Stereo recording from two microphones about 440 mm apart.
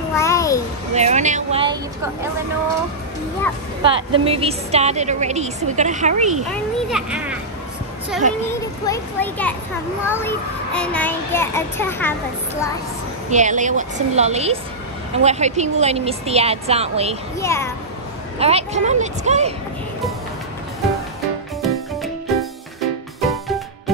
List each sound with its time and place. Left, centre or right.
0.1 s a sound: centre
0.9 s a woman's voice: centre
3.8 s a woman's voice: centre
6.5 s a child's voice: centre
8.2 s a woman's voice: centre
8.5 s a child's voice: centre
13.3 s a woman's voice: centre
17.4 s a child's voice: centre
18.4 s a woman's voice: centre
21.5 s music: centre